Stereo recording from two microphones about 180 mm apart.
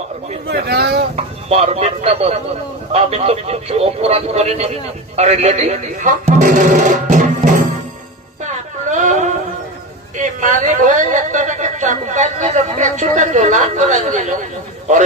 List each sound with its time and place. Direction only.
0.4 s speech: 60° right (ahead or behind)
1.1 s speech: 35° right (ahead or behind)
8.9 s a sound: 45° right (ahead or behind)